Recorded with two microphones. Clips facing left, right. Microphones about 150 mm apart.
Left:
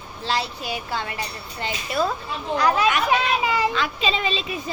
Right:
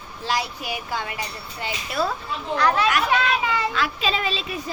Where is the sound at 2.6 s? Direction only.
10° left (ahead or behind).